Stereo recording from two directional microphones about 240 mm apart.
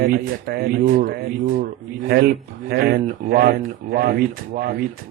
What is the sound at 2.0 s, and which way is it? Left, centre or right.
Speech, right.